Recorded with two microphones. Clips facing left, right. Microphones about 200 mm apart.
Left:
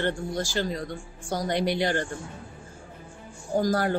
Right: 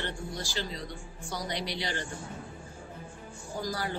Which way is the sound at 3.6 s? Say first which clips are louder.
Left 10 dB; 50° left (ahead or behind).